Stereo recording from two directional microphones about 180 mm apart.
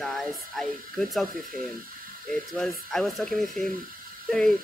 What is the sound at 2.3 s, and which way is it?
Speech, centre (ahead or behind).